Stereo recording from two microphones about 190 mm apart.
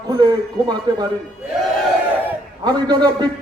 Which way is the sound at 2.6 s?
20° right (ahead or behind).